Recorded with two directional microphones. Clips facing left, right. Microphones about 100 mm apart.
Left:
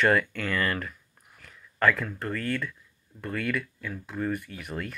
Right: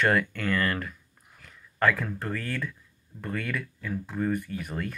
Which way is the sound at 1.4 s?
40° right (ahead or behind).